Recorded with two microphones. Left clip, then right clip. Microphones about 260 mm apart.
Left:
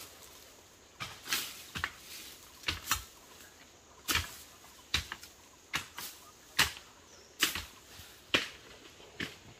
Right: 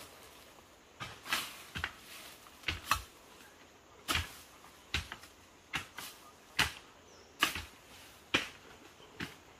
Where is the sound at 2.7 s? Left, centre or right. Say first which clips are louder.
Left 2 dB; centre.